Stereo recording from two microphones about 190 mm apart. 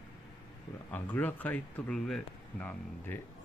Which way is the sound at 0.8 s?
10° left (ahead or behind).